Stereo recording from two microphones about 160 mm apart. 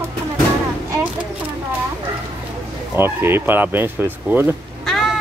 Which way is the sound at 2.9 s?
15° right (ahead or behind).